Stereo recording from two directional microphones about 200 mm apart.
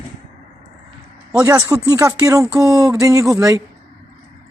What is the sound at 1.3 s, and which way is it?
Speech, 15° right (ahead or behind).